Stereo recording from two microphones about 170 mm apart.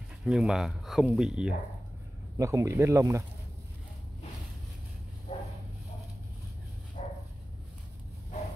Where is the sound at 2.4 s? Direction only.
20° right (ahead or behind).